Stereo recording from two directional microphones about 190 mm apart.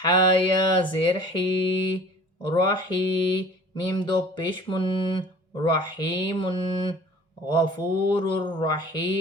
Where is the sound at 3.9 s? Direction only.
25° left (ahead or behind).